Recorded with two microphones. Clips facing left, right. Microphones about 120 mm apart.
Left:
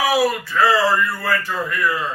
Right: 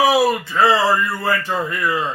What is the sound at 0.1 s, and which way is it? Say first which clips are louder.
Speech: right 2 dB; 25° right (ahead or behind).